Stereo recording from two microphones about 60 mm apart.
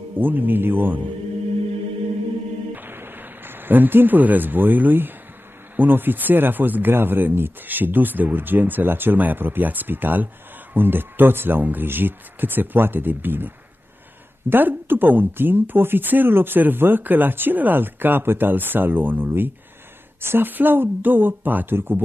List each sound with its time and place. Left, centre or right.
0.2 s speech: right
2.7 s a sound: right
5.8 s speech: right
14.5 s speech: right